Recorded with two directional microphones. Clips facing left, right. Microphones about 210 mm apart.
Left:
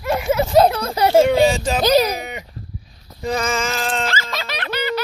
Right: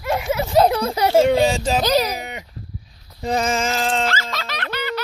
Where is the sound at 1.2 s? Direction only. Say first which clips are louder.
Left 1 dB; 30° right (ahead or behind).